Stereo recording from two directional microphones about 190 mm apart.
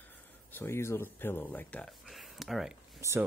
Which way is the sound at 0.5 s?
15° left (ahead or behind).